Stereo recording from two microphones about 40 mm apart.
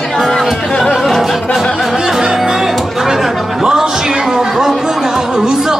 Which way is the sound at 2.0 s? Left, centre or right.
Centre.